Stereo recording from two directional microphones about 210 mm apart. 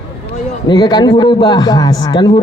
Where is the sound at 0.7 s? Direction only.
20° left (ahead or behind).